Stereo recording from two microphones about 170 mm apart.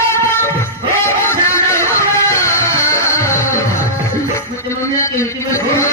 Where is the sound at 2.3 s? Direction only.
15° left (ahead or behind).